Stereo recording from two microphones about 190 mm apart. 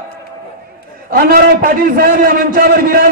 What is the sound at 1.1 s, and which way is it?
A man's voice, 50° right (ahead or behind).